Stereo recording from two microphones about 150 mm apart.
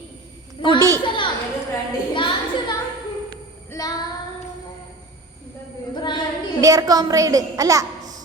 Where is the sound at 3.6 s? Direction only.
20° left (ahead or behind).